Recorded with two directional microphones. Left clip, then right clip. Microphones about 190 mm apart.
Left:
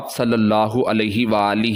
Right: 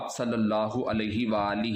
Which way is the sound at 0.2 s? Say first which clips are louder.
Left 11 dB; 50° left (ahead or behind).